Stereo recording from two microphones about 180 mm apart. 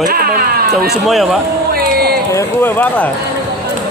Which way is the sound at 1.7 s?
60° right (ahead or behind).